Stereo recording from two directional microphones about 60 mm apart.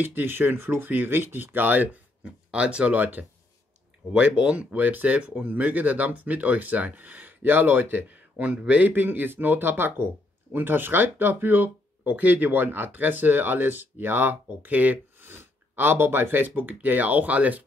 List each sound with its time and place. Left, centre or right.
0.0 s speech: right
4.1 s speech: centre
15.2 s speech: right